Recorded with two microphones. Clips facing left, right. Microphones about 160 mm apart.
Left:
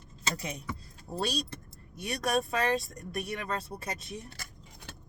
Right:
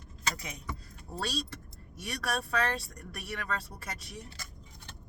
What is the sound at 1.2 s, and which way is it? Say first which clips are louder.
Speech: left 3 dB; 20° left (ahead or behind).